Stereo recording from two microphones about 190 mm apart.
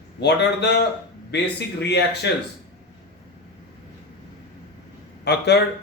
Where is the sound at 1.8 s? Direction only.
60° left (ahead or behind).